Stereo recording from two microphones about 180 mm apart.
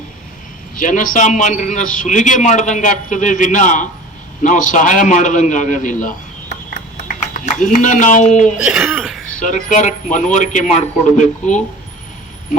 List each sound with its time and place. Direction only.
0.8 s a man's voice: 45° left (ahead or behind)
8.6 s speech: 5° right (ahead or behind)
9.4 s a man's voice: 45° left (ahead or behind)